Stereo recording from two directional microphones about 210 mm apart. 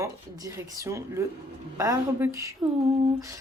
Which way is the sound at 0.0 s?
15° right (ahead or behind).